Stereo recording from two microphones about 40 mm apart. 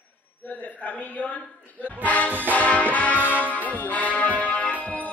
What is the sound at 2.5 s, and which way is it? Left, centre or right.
Music, left.